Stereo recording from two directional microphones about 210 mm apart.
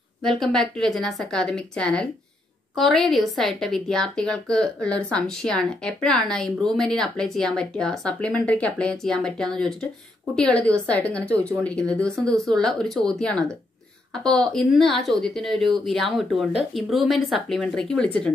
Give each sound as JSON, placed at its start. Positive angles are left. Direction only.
{"t": 0.2, "sound": "a woman's voice", "side_deg": 0}